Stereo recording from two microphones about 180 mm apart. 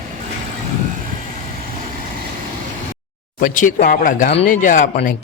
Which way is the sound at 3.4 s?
45° left (ahead or behind).